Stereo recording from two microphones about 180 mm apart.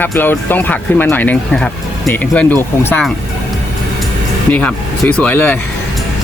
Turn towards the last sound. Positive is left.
turn(degrees=10)  # may be behind; listen again after turning